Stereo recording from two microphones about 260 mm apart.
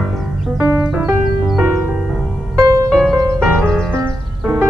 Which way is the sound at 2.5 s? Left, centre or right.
Centre.